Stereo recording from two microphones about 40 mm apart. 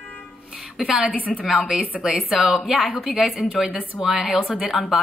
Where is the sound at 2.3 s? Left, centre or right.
Centre.